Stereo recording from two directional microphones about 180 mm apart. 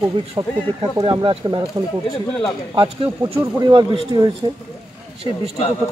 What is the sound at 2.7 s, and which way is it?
Speech, 25° right (ahead or behind).